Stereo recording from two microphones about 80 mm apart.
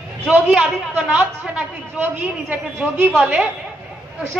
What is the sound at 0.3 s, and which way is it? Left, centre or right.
A man's voice, centre.